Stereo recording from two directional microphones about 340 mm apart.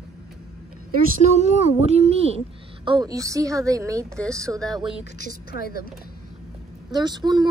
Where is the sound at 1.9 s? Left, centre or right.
Centre.